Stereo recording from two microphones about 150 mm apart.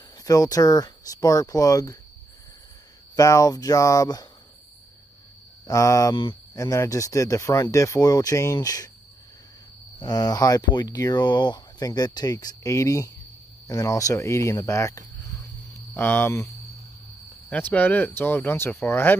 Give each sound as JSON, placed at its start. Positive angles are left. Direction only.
{"t": 0.2, "sound": "speech", "side_deg": 25}
{"t": 3.2, "sound": "speech", "side_deg": 20}
{"t": 5.7, "sound": "speech", "side_deg": 20}
{"t": 9.9, "sound": "speech", "side_deg": 25}
{"t": 17.5, "sound": "speech", "side_deg": 10}